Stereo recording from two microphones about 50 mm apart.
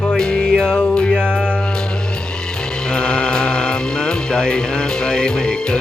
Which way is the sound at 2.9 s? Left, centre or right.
Centre.